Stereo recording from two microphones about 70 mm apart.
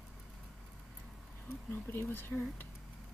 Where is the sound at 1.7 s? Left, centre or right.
Left.